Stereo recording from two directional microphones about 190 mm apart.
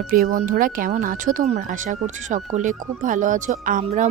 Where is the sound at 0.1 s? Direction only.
45° right (ahead or behind).